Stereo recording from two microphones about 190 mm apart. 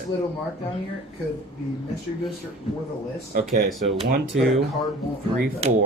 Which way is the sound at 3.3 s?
50° right (ahead or behind).